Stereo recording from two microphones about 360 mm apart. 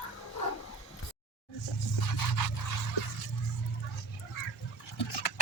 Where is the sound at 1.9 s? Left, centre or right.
Left.